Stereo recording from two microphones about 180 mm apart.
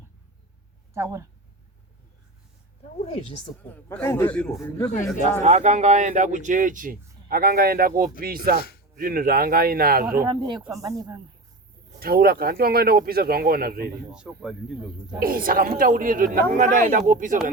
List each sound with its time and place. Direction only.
0.9 s speech: 15° right (ahead or behind)
3.0 s speech: 30° left (ahead or behind)
3.6 s a man's voice: 10° left (ahead or behind)
5.4 s speech: 40° right (ahead or behind)
10.2 s speech: 25° right (ahead or behind)
11.9 s speech: 55° right (ahead or behind)
14.1 s speech: 5° right (ahead or behind)
15.2 s speech: 55° right (ahead or behind)